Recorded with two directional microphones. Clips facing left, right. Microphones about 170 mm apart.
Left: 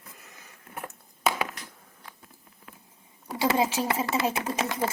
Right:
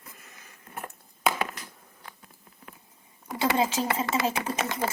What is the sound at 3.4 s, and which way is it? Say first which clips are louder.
Speech: even; 5° left (ahead or behind).